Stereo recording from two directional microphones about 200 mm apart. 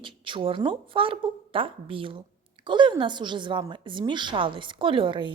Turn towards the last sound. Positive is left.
turn(degrees=-25)  # may be behind; listen again after turning